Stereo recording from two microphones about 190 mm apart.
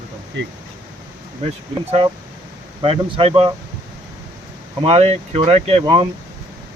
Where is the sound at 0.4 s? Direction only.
75° right (ahead or behind).